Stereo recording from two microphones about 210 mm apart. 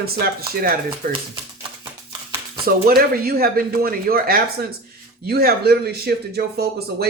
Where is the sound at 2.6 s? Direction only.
45° right (ahead or behind).